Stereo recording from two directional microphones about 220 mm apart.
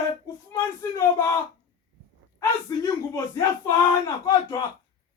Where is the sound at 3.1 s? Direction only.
15° left (ahead or behind).